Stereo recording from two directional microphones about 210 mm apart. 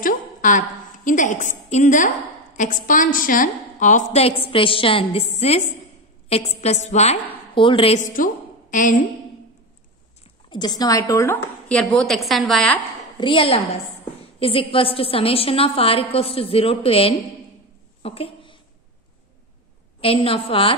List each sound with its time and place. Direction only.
0.0 s a sound: 40° left (ahead or behind)
2.5 s a woman's voice: 40° left (ahead or behind)
10.5 s a woman's voice: 20° left (ahead or behind); by 12.8 s centre (ahead or behind)
13.2 s a woman's voice: 25° left (ahead or behind)
18.0 s a sound: 25° left (ahead or behind)
20.0 s a woman's voice: 25° left (ahead or behind)